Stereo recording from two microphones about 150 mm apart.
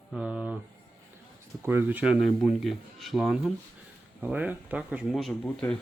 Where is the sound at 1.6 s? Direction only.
10° right (ahead or behind).